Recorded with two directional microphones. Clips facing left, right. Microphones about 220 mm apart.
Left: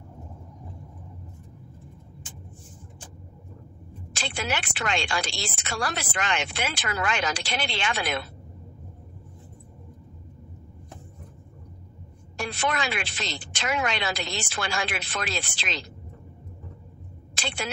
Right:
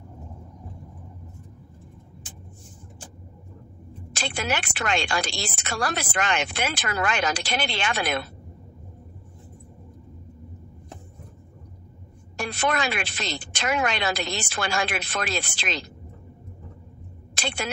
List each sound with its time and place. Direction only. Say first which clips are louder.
4.2 s speech: right 2 dB; 45° right (ahead or behind)
12.4 s speech: right 3 dB; 45° right (ahead or behind)
17.4 s a sound: right 2 dB; 45° right (ahead or behind)